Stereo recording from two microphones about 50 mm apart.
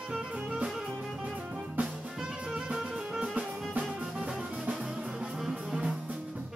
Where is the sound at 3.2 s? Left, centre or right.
Right.